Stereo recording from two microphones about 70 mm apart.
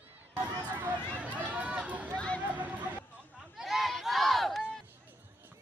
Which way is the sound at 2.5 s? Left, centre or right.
Right.